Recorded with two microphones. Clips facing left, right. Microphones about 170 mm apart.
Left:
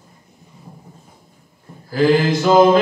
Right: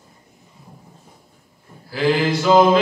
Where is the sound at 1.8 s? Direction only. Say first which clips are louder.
Left 4 dB; 45° left (ahead or behind).